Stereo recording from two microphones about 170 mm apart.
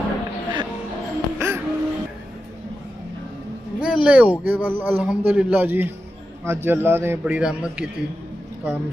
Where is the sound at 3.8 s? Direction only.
5° right (ahead or behind).